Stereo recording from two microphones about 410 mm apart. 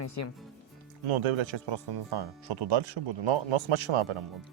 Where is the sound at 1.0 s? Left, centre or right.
Right.